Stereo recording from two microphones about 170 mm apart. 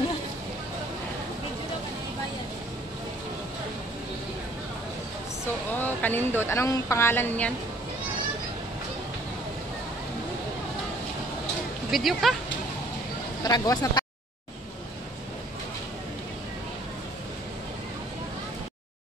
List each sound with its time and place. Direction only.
5.8 s speech: 10° left (ahead or behind)
11.9 s speech: centre (ahead or behind)
13.4 s speech: 20° left (ahead or behind)